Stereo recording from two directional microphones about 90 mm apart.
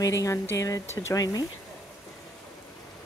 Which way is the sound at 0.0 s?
35° left (ahead or behind).